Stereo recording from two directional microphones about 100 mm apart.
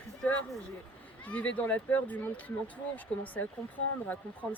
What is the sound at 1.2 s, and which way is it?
Speech, 15° left (ahead or behind).